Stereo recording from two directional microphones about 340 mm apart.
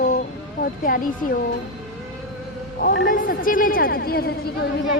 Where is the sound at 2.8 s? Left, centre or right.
Left.